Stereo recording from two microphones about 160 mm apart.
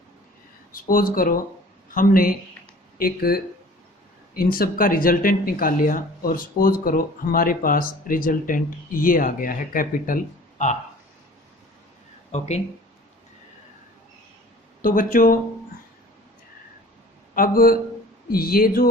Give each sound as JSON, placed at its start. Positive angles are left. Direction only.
{"t": 0.7, "sound": "speech", "side_deg": 60}
{"t": 12.3, "sound": "speech", "side_deg": 45}
{"t": 14.8, "sound": "speech", "side_deg": 60}
{"t": 17.3, "sound": "speech", "side_deg": 65}